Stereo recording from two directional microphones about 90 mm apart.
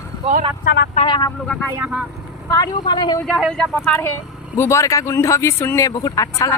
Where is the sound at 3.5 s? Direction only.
5° left (ahead or behind).